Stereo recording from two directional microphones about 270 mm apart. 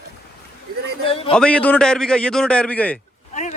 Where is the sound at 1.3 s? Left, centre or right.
Centre.